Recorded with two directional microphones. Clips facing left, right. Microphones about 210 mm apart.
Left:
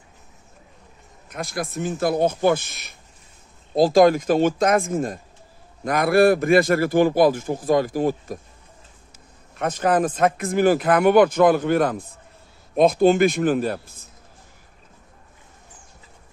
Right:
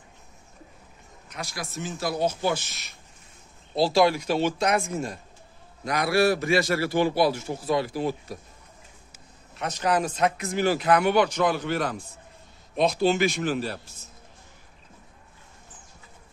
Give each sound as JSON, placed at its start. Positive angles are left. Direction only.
{"t": 1.3, "sound": "a man's voice", "side_deg": 55}
{"t": 9.6, "sound": "a man's voice", "side_deg": 50}